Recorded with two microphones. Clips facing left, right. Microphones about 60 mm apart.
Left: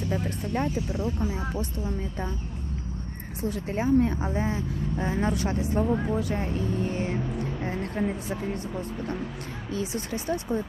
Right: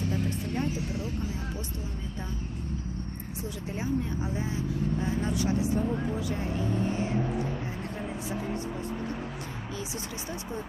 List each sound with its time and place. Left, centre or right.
0.1 s speech: left
3.5 s speech: left
9.7 s speech: left